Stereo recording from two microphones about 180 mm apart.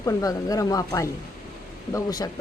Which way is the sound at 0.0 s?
15° left (ahead or behind).